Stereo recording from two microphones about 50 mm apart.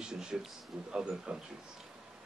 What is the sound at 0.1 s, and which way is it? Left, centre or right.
A man's voice, centre.